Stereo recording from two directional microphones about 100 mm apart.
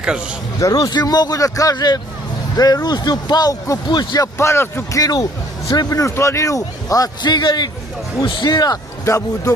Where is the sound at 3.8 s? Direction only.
45° left (ahead or behind).